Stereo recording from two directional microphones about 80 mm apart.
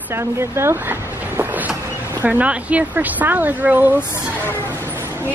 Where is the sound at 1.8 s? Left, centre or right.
Right.